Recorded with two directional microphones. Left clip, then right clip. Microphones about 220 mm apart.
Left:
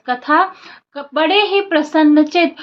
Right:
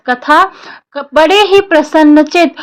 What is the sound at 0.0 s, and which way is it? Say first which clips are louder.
A woman's voice: right 6 dB; 45° right (ahead or behind).